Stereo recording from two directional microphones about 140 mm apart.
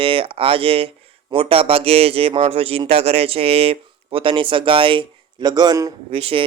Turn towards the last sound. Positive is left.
turn(degrees=-45)  # may be behind; listen again after turning